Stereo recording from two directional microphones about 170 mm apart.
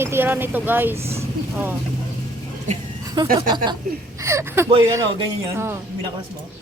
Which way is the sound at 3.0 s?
25° right (ahead or behind).